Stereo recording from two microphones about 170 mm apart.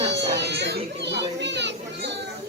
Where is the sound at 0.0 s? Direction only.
90° right.